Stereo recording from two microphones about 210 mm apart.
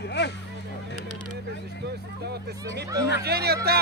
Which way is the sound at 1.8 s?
50° right (ahead or behind).